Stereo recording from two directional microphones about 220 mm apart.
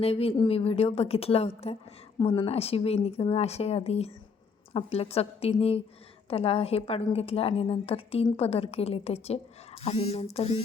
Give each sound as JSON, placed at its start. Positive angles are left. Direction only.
{"t": 0.0, "sound": "a woman's voice", "side_deg": 25}